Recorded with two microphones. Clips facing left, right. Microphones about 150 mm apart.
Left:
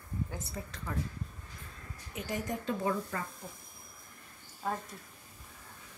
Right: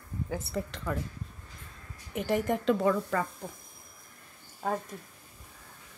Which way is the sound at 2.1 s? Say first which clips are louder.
Right 8 dB; 55° right (ahead or behind).